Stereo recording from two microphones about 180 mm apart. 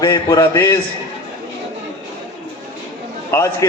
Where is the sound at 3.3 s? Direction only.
15° left (ahead or behind).